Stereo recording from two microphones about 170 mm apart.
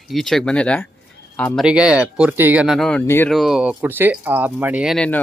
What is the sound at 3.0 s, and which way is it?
Speech, 15° left (ahead or behind).